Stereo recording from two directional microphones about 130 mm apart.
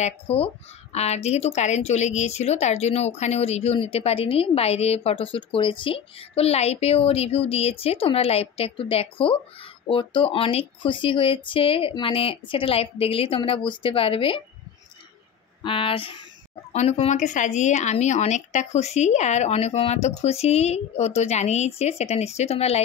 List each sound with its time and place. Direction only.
0.0 s a woman's voice: 50° left (ahead or behind)
15.6 s speech: 40° left (ahead or behind)
16.7 s speech: 55° left (ahead or behind)